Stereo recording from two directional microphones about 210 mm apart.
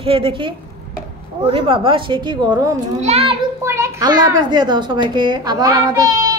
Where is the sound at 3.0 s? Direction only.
30° right (ahead or behind).